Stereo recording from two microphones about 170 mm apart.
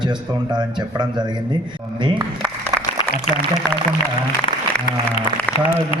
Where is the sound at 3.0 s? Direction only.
30° left (ahead or behind).